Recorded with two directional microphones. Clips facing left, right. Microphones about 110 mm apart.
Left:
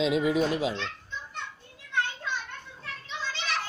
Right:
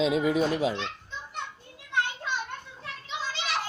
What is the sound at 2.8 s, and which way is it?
Children playing, 15° right (ahead or behind).